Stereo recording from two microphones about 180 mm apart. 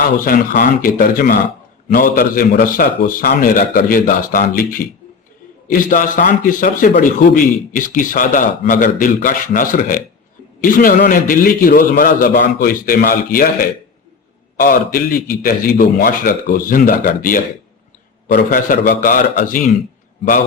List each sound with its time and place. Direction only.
0.2 s a man's voice: 50° left (ahead or behind)